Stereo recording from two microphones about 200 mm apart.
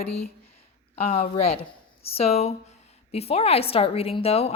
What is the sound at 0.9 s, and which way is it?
A woman's voice, 30° left (ahead or behind).